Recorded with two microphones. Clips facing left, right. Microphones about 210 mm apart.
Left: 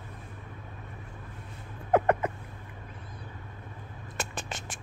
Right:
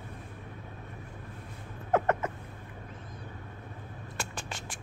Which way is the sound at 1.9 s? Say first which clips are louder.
Left 3 dB; 15° left (ahead or behind).